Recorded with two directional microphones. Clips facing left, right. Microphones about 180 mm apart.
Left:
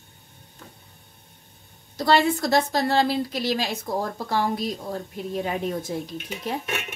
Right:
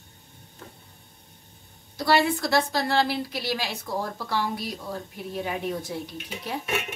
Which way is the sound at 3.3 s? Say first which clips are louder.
Left 4 dB; 45° left (ahead or behind).